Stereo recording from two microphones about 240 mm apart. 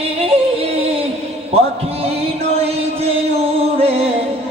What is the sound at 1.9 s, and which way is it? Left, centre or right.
Music, right.